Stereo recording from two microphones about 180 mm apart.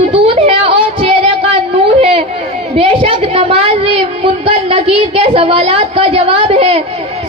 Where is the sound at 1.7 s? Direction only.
30° right (ahead or behind).